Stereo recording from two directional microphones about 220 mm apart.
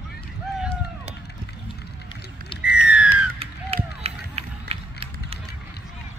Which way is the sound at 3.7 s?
25° right (ahead or behind).